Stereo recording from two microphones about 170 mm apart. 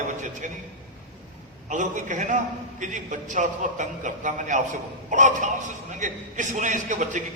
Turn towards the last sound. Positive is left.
turn(degrees=-45)  # may be behind; listen again after turning